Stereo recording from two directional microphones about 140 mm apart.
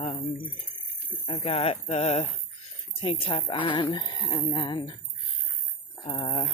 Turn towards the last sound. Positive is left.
turn(degrees=45)  # may be behind; listen again after turning